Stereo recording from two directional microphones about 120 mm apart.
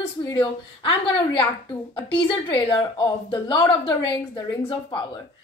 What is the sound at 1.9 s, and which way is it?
A woman's voice, 45° left (ahead or behind).